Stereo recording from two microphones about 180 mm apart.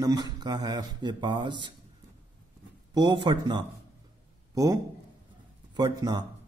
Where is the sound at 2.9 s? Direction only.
25° right (ahead or behind).